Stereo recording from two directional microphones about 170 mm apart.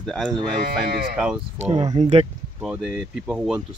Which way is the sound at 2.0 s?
40° right (ahead or behind).